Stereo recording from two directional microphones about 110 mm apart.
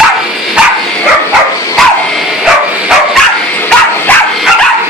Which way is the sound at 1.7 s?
Centre (ahead or behind).